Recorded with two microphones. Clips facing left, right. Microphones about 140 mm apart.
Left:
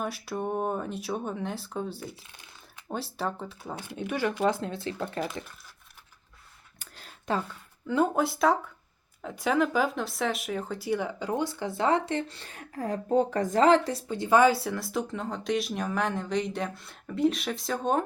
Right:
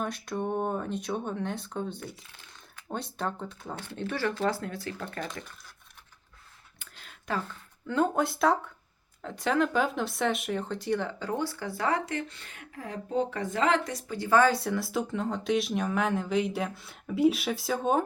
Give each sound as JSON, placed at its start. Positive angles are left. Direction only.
{"t": 0.0, "sound": "speech", "side_deg": 5}
{"t": 5.2, "sound": "speech", "side_deg": 5}
{"t": 6.7, "sound": "a sound", "side_deg": 40}
{"t": 7.9, "sound": "speech", "side_deg": 5}
{"t": 14.5, "sound": "speech", "side_deg": 0}